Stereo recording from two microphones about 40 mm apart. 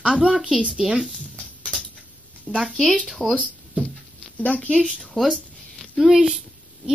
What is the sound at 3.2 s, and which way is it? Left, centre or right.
Speech, centre.